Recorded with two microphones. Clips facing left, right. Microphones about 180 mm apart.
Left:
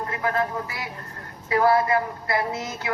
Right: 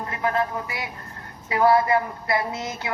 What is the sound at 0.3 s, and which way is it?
Speech, 20° right (ahead or behind).